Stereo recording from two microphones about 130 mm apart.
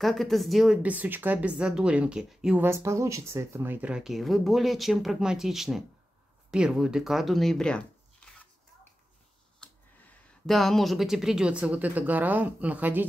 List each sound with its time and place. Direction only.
0.0 s speech: centre (ahead or behind)
0.8 s speech: 15° right (ahead or behind)
2.6 s speech: 20° right (ahead or behind); by 8.5 s 10° left (ahead or behind)
10.4 s speech: centre (ahead or behind)